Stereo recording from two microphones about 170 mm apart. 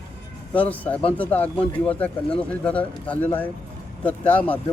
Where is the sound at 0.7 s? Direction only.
10° left (ahead or behind).